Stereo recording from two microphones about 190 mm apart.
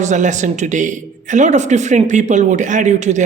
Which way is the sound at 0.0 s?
40° right (ahead or behind).